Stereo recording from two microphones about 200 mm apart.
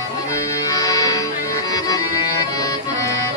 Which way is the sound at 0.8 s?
15° left (ahead or behind).